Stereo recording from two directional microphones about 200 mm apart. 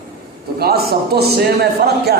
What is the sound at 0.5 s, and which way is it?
Speech, 50° right (ahead or behind).